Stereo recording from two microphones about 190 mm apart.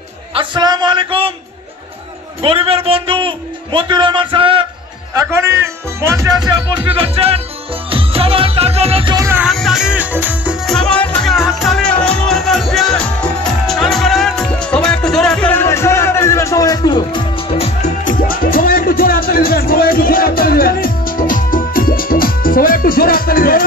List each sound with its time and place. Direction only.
0.3 s a man's voice: 25° right (ahead or behind)
2.4 s a man's voice: 30° right (ahead or behind)
5.1 s speech: 15° right (ahead or behind)
7.0 s music: 30° right (ahead or behind)
9.4 s music: centre (ahead or behind); by 23.6 s 50° left (ahead or behind)